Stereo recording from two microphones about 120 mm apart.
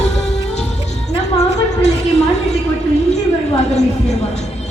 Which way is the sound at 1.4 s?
70° left (ahead or behind).